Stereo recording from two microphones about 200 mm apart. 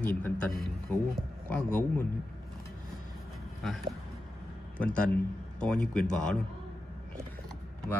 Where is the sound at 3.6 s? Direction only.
Centre (ahead or behind).